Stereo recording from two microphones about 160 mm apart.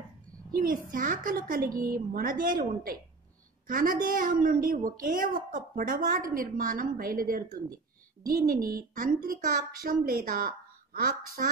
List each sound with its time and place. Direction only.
0.5 s a woman's voice: 60° right (ahead or behind)